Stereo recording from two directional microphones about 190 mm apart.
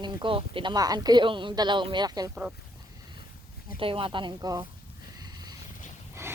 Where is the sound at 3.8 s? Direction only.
30° right (ahead or behind).